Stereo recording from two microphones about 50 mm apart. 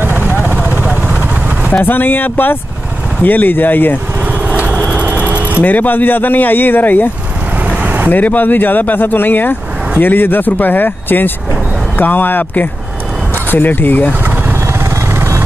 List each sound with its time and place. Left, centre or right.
0.0 s vehicle: right
1.9 s speech: left
4.5 s vehicle: right
5.6 s speech: left
8.1 s speech: left